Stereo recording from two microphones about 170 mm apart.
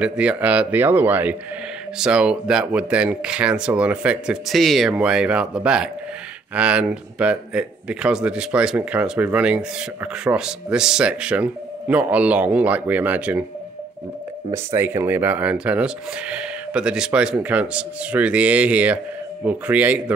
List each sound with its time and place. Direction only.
0.0 s a man's voice: 5° right (ahead or behind)
14.5 s speech: 15° right (ahead or behind)